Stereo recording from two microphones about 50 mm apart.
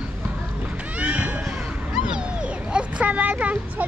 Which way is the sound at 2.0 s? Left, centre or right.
Centre.